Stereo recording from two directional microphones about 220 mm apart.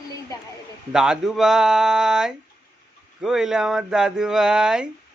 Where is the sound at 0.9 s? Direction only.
5° right (ahead or behind).